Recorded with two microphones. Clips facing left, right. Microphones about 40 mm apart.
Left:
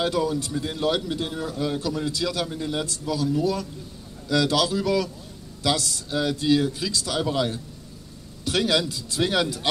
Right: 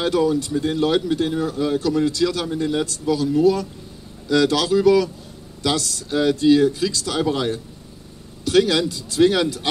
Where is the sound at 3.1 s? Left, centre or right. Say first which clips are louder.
Right 7 dB; right.